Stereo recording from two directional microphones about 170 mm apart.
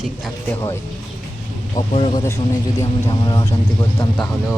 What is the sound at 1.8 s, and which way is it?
Speech, 35° left (ahead or behind).